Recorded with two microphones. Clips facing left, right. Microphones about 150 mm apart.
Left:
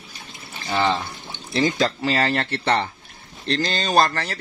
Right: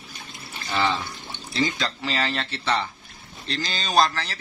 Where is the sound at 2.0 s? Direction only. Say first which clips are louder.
Left 5 dB; 55° left (ahead or behind).